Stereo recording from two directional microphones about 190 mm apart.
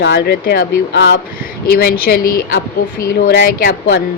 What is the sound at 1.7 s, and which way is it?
Speech, 50° left (ahead or behind).